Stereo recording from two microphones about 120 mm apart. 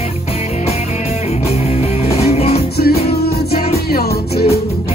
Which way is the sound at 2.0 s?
60° left (ahead or behind).